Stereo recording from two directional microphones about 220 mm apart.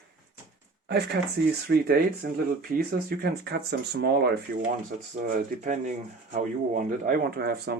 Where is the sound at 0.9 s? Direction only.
50° right (ahead or behind).